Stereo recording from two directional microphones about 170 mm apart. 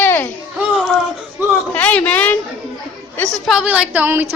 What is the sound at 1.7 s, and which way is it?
Speech, 10° left (ahead or behind).